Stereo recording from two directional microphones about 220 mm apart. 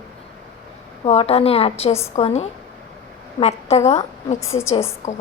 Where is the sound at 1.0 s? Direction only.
25° left (ahead or behind).